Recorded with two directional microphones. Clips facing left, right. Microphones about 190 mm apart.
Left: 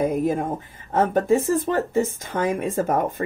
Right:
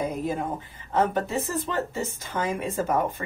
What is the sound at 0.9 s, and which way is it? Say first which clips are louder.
Speech: left 6 dB; 45° left (ahead or behind).